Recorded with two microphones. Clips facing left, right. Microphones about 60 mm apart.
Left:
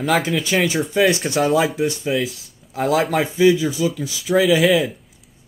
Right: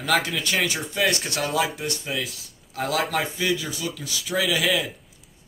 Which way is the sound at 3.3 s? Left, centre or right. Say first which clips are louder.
Left 11 dB; centre.